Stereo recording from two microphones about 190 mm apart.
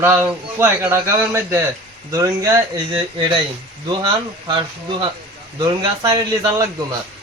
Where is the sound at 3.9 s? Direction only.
25° right (ahead or behind).